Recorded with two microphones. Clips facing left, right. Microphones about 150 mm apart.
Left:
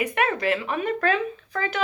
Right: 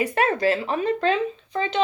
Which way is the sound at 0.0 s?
35° right (ahead or behind).